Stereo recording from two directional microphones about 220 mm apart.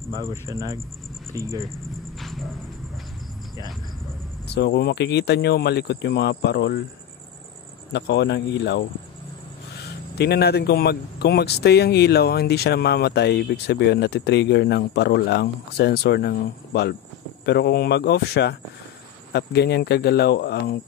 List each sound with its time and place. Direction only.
0.1 s speech: 15° right (ahead or behind)
2.1 s a sound: centre (ahead or behind)
4.5 s speech: 45° left (ahead or behind)
7.9 s speech: 50° left (ahead or behind)
10.1 s speech: 45° left (ahead or behind)